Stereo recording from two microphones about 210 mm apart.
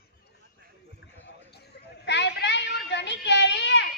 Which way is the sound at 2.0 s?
55° left (ahead or behind).